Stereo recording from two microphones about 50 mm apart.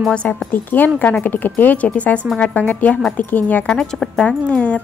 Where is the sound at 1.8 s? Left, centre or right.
Left.